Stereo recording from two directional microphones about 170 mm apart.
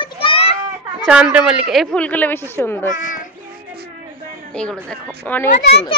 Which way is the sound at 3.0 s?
50° left (ahead or behind).